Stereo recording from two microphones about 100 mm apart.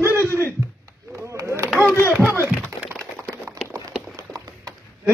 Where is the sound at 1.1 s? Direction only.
30° right (ahead or behind).